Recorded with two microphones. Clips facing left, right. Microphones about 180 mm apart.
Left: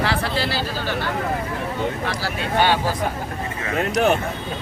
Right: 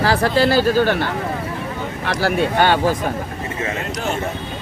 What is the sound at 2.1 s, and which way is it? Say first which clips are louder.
Speech: right 7 dB; 55° right (ahead or behind).